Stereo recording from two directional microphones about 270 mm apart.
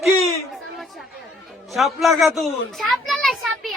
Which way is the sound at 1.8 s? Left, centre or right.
Centre.